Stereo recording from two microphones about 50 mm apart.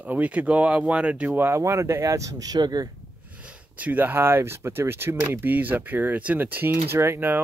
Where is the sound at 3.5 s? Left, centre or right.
Right.